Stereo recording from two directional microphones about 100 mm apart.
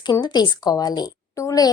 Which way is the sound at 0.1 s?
45° left (ahead or behind).